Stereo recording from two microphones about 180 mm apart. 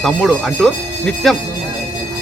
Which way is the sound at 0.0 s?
Centre (ahead or behind).